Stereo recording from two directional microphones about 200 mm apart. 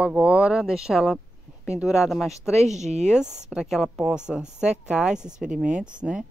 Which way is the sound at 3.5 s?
Centre (ahead or behind).